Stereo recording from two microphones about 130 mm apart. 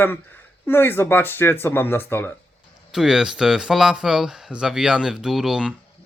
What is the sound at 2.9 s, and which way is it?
Speech, 5° right (ahead or behind).